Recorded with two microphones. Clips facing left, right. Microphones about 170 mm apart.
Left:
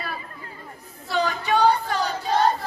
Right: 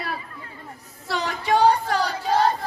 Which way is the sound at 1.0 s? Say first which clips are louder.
Left 2 dB; 85° right.